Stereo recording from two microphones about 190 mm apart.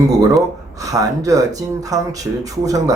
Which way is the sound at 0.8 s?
15° right (ahead or behind).